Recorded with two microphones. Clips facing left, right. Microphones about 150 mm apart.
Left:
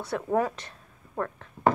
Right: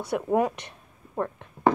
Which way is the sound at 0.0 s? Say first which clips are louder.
Right 2 dB; 15° right (ahead or behind).